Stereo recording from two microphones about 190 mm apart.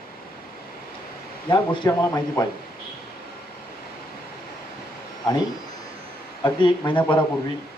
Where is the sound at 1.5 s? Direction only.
25° left (ahead or behind).